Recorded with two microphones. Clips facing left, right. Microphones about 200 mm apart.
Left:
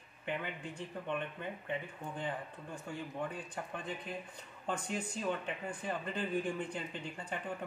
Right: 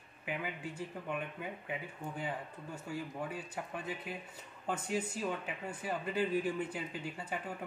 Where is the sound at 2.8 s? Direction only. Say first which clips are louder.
Even; 5° right (ahead or behind).